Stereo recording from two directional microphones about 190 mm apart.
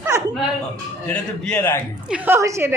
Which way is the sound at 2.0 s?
10° right (ahead or behind).